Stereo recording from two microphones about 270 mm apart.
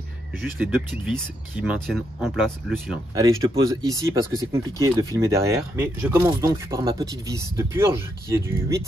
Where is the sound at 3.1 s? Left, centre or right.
Centre.